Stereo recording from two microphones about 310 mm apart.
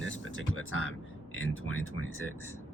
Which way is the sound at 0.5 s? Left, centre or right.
Left.